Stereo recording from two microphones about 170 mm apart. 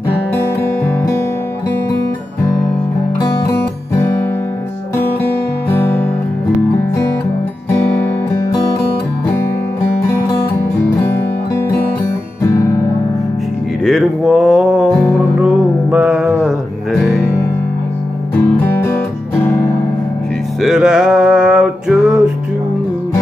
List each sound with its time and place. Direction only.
5.7 s music: 15° left (ahead or behind)
11.0 s music: 15° left (ahead or behind)
13.8 s music: centre (ahead or behind)
18.6 s music: 15° left (ahead or behind)
20.6 s music: 5° right (ahead or behind)